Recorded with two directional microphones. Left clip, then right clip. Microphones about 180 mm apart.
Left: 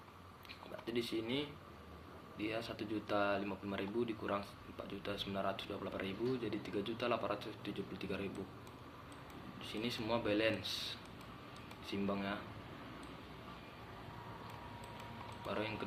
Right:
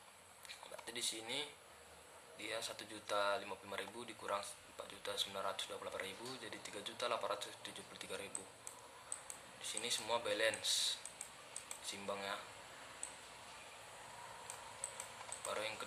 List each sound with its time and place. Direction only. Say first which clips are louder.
0.9 s speech: left 4 dB; 15° right (ahead or behind)
9.6 s speech: even; 15° right (ahead or behind)
15.4 s speech: left 2 dB; 15° right (ahead or behind)